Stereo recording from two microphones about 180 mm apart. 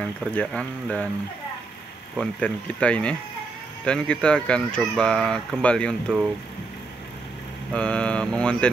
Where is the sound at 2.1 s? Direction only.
5° left (ahead or behind).